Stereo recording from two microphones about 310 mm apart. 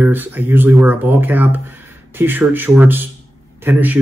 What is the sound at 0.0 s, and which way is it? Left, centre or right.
Speech, centre.